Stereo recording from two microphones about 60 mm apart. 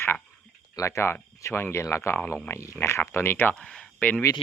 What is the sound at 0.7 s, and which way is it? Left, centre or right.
Speech, left.